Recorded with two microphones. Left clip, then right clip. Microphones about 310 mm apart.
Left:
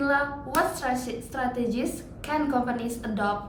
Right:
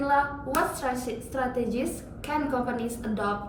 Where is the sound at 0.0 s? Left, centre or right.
Centre.